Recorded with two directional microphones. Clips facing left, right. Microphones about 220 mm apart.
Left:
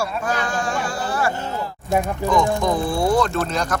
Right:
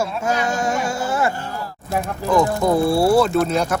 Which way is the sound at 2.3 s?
5° right (ahead or behind).